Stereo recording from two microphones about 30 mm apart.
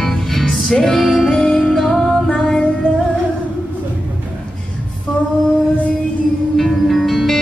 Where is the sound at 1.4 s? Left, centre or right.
Left.